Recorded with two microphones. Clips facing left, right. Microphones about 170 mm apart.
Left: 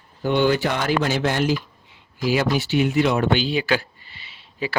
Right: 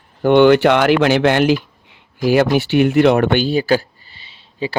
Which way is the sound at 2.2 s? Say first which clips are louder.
Right 7 dB; 55° right (ahead or behind).